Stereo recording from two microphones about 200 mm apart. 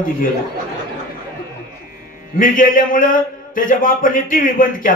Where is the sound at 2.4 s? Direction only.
45° left (ahead or behind).